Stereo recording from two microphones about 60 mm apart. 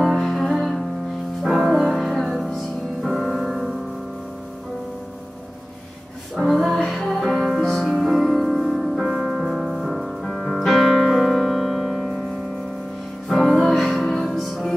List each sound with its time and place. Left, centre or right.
0.0 s music: centre
6.3 s music: centre
13.3 s music: centre